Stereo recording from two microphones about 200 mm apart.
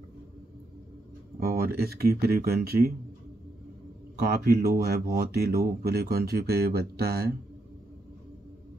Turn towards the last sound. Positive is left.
turn(degrees=-50)  # may be behind; listen again after turning